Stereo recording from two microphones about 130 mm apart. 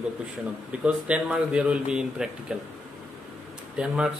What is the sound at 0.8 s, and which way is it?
Speech, 10° right (ahead or behind).